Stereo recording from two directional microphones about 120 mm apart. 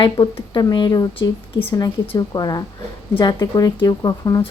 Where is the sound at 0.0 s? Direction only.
40° left (ahead or behind).